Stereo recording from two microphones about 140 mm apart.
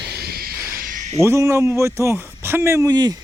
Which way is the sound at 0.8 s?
65° right (ahead or behind).